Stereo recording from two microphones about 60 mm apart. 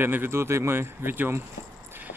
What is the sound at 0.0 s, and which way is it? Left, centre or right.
Speech, right.